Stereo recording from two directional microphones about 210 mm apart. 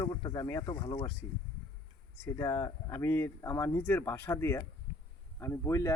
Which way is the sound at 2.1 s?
10° left (ahead or behind).